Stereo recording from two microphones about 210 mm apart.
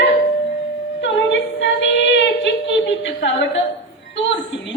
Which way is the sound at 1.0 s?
60° left (ahead or behind).